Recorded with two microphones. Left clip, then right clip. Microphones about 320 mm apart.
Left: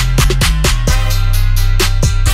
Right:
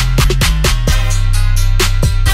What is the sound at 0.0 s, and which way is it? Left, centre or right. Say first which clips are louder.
Music: even; right.